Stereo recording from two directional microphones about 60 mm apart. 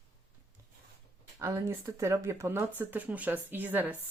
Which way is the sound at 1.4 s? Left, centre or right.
Right.